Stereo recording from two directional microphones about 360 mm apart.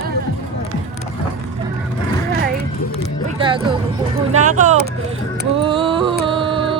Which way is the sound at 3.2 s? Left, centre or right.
Centre.